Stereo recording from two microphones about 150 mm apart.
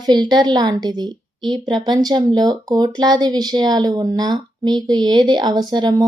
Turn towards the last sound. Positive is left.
turn(degrees=-25)  # may be behind; listen again after turning